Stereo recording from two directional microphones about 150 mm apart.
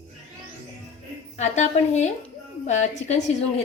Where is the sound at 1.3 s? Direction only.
50° left (ahead or behind).